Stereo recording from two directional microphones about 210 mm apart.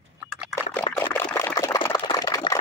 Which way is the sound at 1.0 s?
10° left (ahead or behind).